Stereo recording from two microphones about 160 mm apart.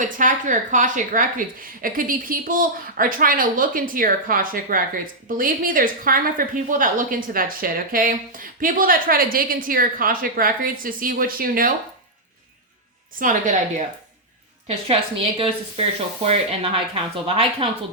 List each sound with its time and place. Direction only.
0.0 s a woman's voice: 55° right (ahead or behind)
13.1 s a woman's voice: 55° right (ahead or behind)
14.8 s speech: 35° right (ahead or behind)